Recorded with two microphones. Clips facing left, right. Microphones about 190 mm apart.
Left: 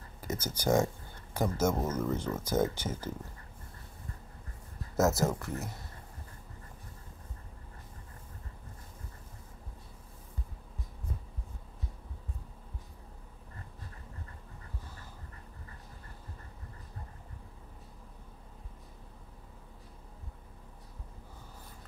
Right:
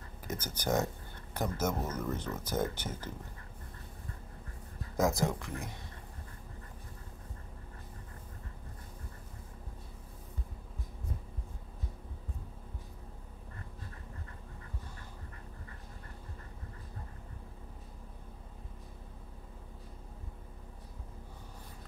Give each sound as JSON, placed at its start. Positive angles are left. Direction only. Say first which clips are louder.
{"t": 0.2, "sound": "speech", "louder": "left 4 dB", "side_deg": 10}
{"t": 5.1, "sound": "speech", "louder": "left 2 dB", "side_deg": 5}